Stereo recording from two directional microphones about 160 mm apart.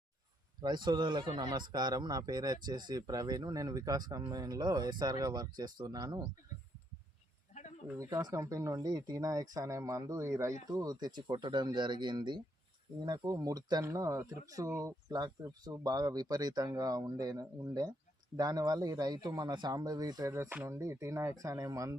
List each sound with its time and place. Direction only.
0.6 s a man's voice: 25° right (ahead or behind)
7.5 s a sound: 45° left (ahead or behind)
7.9 s a man's voice: 20° right (ahead or behind)